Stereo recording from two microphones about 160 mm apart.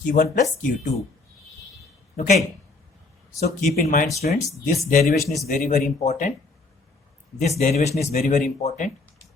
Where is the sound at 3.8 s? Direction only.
55° left (ahead or behind).